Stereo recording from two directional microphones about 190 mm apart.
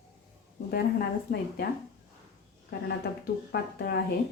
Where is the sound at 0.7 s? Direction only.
55° left (ahead or behind).